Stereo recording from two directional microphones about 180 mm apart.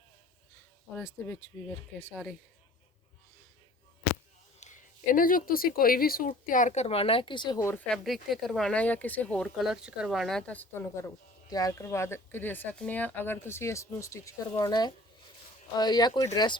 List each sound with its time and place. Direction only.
0.9 s speech: 15° left (ahead or behind)
4.6 s a woman's voice: 45° left (ahead or behind); by 7.9 s 15° left (ahead or behind)
7.9 s speech: centre (ahead or behind)
11.4 s speech: 20° left (ahead or behind)